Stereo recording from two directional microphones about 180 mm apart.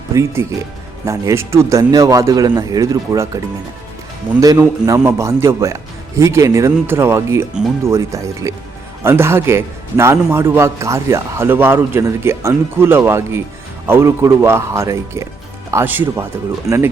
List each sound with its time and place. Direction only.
0.1 s a man's voice: 15° right (ahead or behind)